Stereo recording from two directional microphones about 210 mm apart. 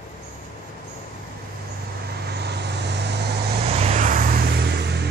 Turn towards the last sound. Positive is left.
turn(degrees=-50)  # may be behind; listen again after turning